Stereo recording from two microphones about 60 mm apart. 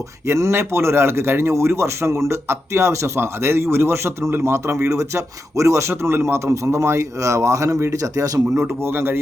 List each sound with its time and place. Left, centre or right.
0.3 s a man's voice: right
8.0 s speech: right
8.6 s speech: right